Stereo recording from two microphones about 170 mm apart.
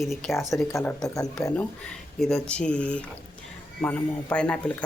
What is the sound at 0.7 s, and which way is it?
Speech, 15° left (ahead or behind).